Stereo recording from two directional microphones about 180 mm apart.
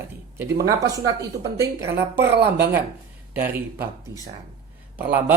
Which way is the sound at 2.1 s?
65° right (ahead or behind).